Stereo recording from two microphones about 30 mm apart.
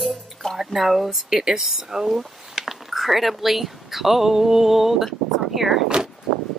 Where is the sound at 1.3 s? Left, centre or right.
Right.